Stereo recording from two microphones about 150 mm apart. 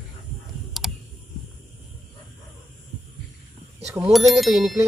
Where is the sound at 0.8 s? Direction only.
Centre (ahead or behind).